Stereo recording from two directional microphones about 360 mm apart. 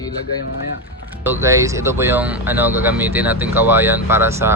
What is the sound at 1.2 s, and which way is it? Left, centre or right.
Speech, centre.